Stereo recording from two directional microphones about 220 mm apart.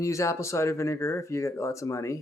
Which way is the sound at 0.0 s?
15° left (ahead or behind).